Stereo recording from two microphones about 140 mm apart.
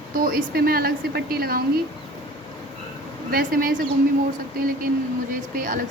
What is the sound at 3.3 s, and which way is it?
Speech, 90° right.